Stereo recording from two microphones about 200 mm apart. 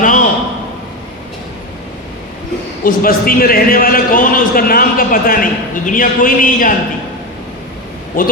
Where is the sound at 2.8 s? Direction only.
45° left (ahead or behind).